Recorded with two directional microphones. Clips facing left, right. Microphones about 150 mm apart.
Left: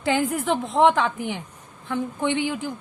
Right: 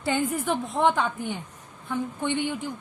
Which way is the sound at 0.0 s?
90° left.